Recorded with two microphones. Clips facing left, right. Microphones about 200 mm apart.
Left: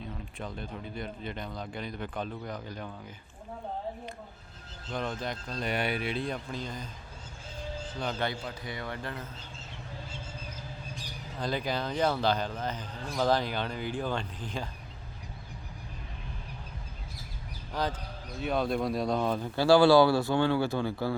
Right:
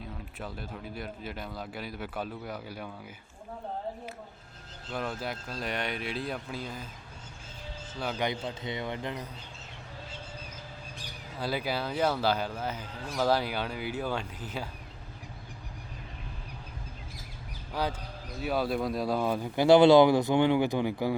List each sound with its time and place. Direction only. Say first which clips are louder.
0.3 s speech: left 1 dB; 5° right (ahead or behind)
4.9 s speech: even; 5° right (ahead or behind)
7.9 s speech: right 1 dB; 5° right (ahead or behind)
8.3 s a man's voice: right 3 dB; 20° right (ahead or behind)
11.3 s speech: even; 5° right (ahead or behind)
17.7 s speech: even; 10° right (ahead or behind)